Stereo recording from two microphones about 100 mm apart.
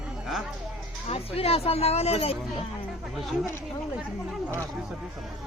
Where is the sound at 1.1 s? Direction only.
80° left.